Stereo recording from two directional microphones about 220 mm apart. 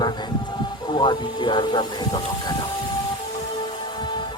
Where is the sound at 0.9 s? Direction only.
20° left (ahead or behind).